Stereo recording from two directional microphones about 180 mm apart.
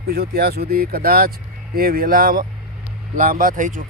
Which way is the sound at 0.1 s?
60° right (ahead or behind).